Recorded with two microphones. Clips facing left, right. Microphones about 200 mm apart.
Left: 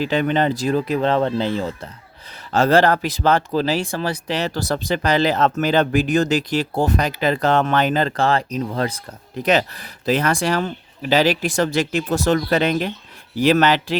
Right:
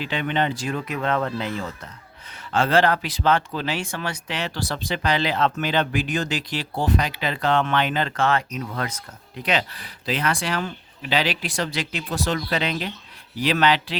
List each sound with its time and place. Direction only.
0.0 s speech: 40° left (ahead or behind)
2.5 s speech: 40° left (ahead or behind)
9.4 s speech: 40° left (ahead or behind)